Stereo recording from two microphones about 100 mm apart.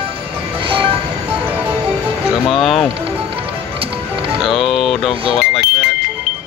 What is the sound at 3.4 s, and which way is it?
Music, 70° right (ahead or behind).